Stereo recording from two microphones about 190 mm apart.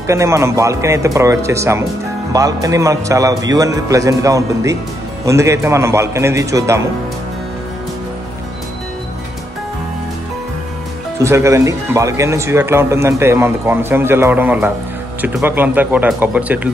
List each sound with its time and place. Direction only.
0.0 s speech: 15° right (ahead or behind)
11.1 s speech: 15° right (ahead or behind)